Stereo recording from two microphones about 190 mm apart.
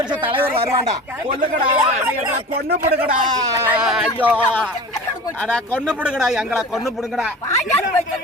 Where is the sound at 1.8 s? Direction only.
10° right (ahead or behind).